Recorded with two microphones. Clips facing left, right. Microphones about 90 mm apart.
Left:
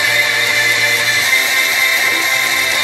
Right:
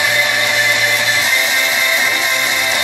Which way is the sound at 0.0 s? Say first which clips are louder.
Right 1 dB; 20° right (ahead or behind).